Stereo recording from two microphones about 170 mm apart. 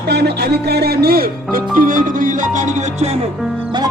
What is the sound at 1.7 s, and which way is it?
Speech, 55° right (ahead or behind).